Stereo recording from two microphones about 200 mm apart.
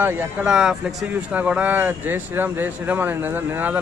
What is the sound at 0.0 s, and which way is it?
Speech, 10° right (ahead or behind).